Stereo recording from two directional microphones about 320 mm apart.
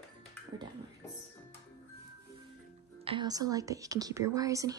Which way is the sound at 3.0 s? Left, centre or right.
Centre.